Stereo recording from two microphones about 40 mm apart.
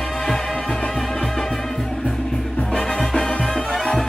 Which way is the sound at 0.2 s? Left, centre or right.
Centre.